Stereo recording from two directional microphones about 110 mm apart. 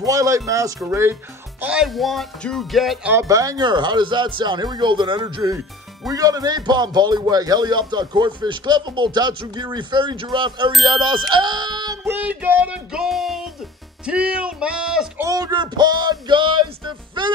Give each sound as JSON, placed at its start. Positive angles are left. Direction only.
{"t": 0.0, "sound": "a man's voice", "side_deg": -30}
{"t": 1.6, "sound": "music", "side_deg": -5}
{"t": 3.3, "sound": "a man's voice", "side_deg": -35}
{"t": 12.0, "sound": "music", "side_deg": -20}
{"t": 14.0, "sound": "speech", "side_deg": -10}
{"t": 15.1, "sound": "music", "side_deg": -30}